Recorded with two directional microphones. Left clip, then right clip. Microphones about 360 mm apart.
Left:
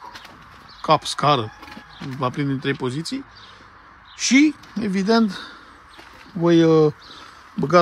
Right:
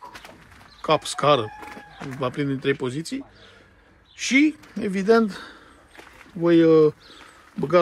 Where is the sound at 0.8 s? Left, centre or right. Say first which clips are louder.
Left 2 dB; centre.